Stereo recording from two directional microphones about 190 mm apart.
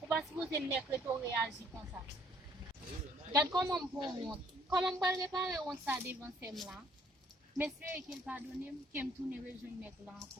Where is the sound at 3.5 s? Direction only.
15° right (ahead or behind).